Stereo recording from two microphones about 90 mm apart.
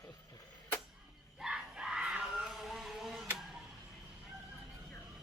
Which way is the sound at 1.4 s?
10° right (ahead or behind).